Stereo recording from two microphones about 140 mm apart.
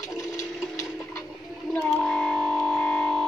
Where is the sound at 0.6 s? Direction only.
Centre (ahead or behind).